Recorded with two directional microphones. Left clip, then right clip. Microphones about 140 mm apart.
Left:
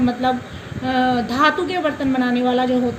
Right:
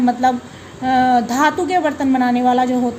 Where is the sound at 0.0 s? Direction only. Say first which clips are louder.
Right 4 dB; 70° right (ahead or behind).